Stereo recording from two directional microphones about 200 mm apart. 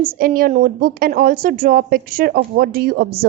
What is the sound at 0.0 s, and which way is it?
A woman's voice, 45° right (ahead or behind).